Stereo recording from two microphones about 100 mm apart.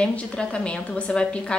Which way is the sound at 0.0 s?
10° left (ahead or behind).